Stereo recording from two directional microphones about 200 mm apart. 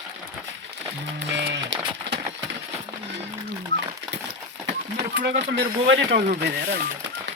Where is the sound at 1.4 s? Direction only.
60° right (ahead or behind).